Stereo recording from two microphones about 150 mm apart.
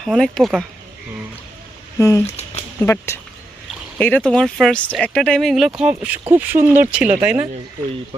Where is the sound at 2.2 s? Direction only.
45° left (ahead or behind).